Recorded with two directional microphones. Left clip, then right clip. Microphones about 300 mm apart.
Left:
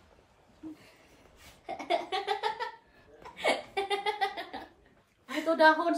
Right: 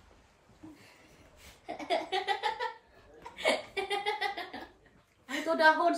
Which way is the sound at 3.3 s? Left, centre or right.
Centre.